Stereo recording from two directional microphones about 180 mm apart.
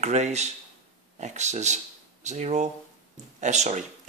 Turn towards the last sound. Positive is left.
turn(degrees=-40)  # may be behind; listen again after turning